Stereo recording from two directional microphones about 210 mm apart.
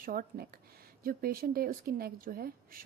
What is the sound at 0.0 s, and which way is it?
A woman's voice, 45° right (ahead or behind).